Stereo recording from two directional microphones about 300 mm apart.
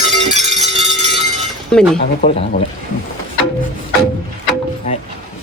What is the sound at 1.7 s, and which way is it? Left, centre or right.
Speech, centre.